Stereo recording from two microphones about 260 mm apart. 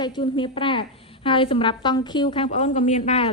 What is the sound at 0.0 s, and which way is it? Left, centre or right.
A woman's voice, centre.